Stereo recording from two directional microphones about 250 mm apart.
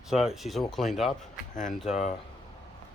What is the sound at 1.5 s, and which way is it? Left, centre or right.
Speech, left.